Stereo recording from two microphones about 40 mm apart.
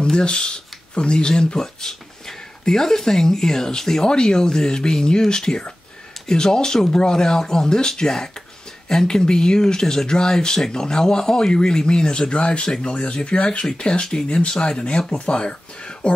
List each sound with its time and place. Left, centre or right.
0.0 s speech: centre